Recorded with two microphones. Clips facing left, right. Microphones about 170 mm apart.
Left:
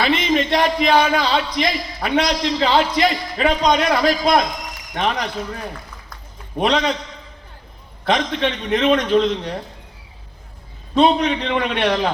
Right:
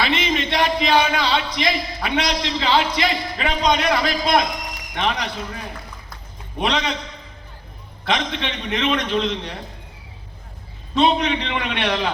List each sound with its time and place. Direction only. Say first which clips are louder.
0.0 s speech: left 4 dB; 45° left (ahead or behind)
6.6 s speech: left 4 dB; 45° left (ahead or behind)
8.0 s speech: left 4 dB; 45° left (ahead or behind)
10.9 s speech: left 3 dB; 45° left (ahead or behind)